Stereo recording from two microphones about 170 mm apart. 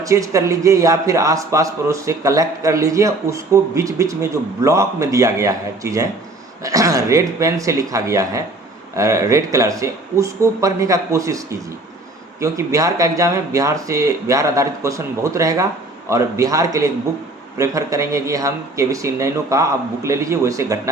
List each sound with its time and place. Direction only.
0.0 s a man's voice: 20° right (ahead or behind)